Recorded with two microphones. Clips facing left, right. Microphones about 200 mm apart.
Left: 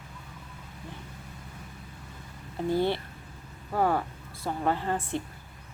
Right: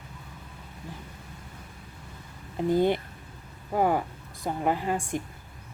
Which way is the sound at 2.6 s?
15° right (ahead or behind).